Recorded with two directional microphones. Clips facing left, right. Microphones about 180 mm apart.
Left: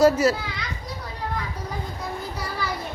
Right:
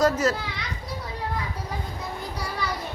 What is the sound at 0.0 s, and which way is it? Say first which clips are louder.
Speech: left 4 dB; 10° left (ahead or behind).